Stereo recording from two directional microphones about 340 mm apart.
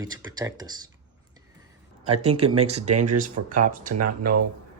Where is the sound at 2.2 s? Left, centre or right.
Centre.